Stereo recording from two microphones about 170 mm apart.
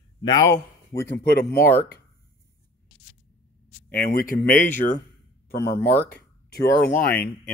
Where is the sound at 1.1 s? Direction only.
70° left (ahead or behind).